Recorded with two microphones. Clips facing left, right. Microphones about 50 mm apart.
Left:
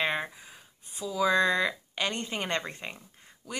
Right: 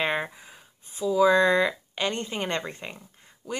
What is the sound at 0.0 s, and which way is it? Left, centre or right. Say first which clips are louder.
Speech: right 3 dB; centre.